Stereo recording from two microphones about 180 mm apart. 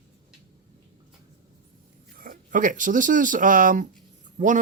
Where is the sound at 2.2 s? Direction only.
50° right (ahead or behind).